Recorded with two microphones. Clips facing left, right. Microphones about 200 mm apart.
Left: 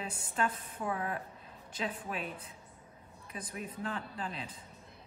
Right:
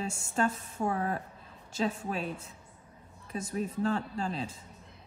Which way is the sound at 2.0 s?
25° right (ahead or behind).